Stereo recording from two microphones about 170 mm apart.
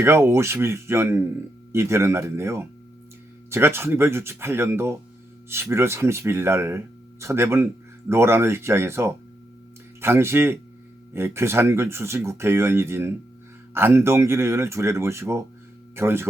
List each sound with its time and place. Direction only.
0.0 s speech: 15° right (ahead or behind)